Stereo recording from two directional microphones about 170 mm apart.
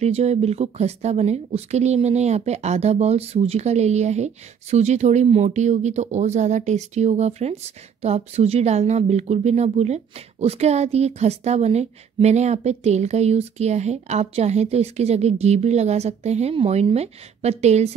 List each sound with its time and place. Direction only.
0.0 s speech: 40° right (ahead or behind)